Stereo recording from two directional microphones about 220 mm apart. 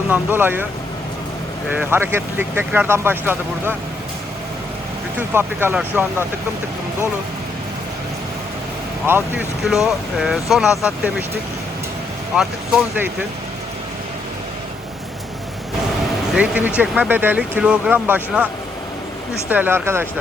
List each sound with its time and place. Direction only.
0.1 s speech: 10° right (ahead or behind)
1.7 s speech: 10° right (ahead or behind)
5.3 s speech: 10° right (ahead or behind)
9.0 s speech: 10° right (ahead or behind)
12.4 s speech: 5° right (ahead or behind)
16.3 s speech: 5° right (ahead or behind)
19.5 s speech: 10° right (ahead or behind)